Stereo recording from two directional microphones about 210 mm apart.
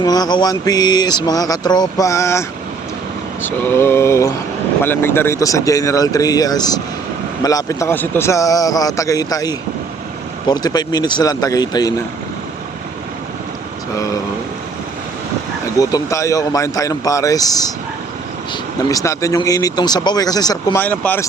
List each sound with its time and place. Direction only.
0.0 s speech: 20° left (ahead or behind)
3.4 s a man's voice: 10° left (ahead or behind)
15.8 s a man's voice: 15° left (ahead or behind)
18.9 s a man's voice: 15° left (ahead or behind)
20.8 s a man's voice: 10° left (ahead or behind)